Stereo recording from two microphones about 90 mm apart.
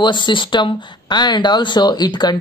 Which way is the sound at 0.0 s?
60° left (ahead or behind).